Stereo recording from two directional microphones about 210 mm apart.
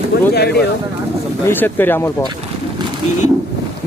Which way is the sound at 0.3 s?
50° left (ahead or behind).